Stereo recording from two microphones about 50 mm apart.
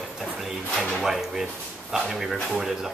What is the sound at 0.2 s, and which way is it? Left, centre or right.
Drawer open or close, centre.